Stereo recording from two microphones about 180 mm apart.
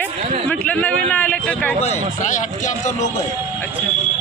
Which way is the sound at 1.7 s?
35° left (ahead or behind).